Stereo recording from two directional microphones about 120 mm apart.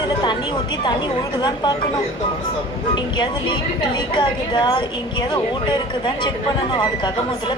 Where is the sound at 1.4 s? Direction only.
35° left (ahead or behind).